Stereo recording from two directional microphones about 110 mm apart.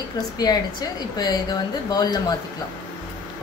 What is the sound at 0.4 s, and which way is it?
Speech, 40° left (ahead or behind).